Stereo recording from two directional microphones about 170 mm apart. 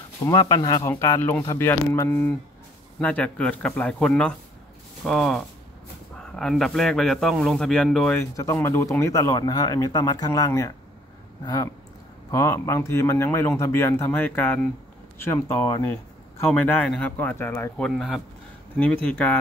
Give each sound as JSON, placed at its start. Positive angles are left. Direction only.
{"t": 0.2, "sound": "a man's voice", "side_deg": 20}
{"t": 8.2, "sound": "speech", "side_deg": 15}
{"t": 17.8, "sound": "a man's voice", "side_deg": 0}